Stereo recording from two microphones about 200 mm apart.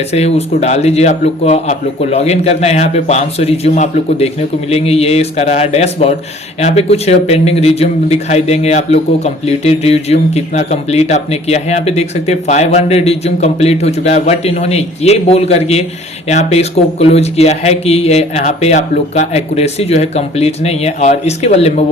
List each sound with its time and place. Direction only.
0.1 s a man's voice: 30° left (ahead or behind)